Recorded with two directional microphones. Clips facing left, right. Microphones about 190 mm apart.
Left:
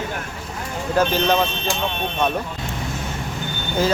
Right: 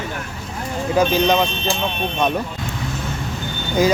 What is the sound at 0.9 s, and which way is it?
Speech, 10° right (ahead or behind).